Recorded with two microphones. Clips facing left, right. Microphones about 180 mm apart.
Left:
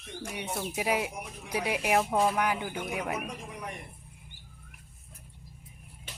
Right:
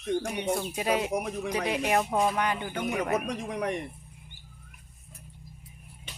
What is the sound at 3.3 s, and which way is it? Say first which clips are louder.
Speech: right 9 dB; 90° right.